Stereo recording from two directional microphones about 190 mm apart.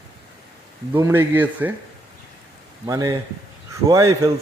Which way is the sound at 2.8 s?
20° right (ahead or behind).